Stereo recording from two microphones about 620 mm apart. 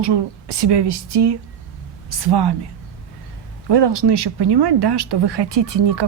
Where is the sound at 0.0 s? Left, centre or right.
Right.